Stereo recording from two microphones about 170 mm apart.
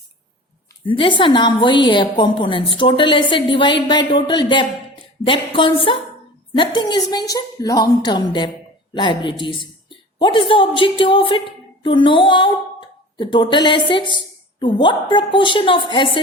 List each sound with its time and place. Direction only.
0.9 s a woman's voice: 30° left (ahead or behind)